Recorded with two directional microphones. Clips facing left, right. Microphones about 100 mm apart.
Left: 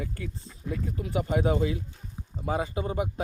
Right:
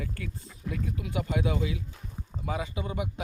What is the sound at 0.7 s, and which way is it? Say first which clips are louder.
Speech: left 3 dB; 35° left (ahead or behind).